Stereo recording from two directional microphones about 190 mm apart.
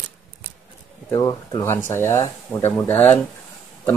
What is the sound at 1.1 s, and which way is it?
Speech, 20° left (ahead or behind).